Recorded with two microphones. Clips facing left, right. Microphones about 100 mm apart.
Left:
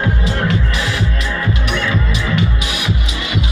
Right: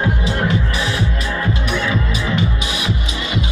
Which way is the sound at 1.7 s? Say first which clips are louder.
Left 1 dB; 15° right (ahead or behind).